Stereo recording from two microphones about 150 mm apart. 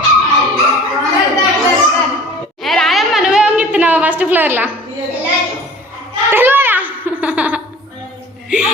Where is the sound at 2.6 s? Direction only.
Centre (ahead or behind).